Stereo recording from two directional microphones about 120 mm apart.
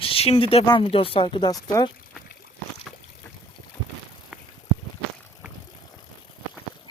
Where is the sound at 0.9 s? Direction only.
50° left (ahead or behind).